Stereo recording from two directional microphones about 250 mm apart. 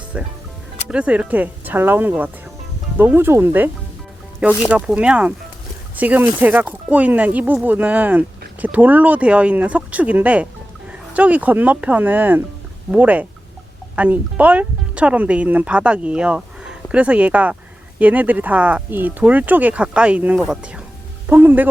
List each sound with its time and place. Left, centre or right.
0.9 s speech: centre
4.7 s speech: centre